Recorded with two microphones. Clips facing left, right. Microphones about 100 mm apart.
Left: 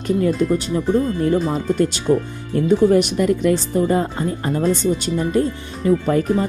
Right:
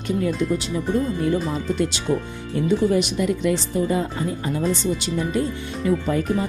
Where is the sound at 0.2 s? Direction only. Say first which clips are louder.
Left 4 dB; 45° left (ahead or behind).